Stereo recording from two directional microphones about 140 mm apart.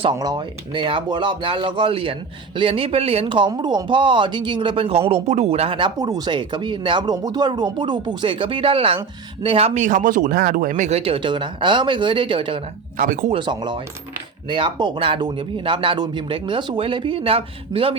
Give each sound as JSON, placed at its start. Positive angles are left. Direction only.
{"t": 0.0, "sound": "speech", "side_deg": -30}
{"t": 13.0, "sound": "speech", "side_deg": -75}
{"t": 13.3, "sound": "speech", "side_deg": -35}